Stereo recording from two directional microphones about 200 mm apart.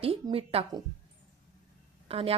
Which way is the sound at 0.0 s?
30° right (ahead or behind).